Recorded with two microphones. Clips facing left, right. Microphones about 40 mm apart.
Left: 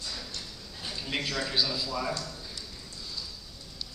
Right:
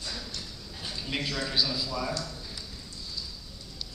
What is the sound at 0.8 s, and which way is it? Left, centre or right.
A man's voice, centre.